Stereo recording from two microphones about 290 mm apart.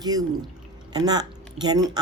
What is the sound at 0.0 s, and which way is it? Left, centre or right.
Speech, centre.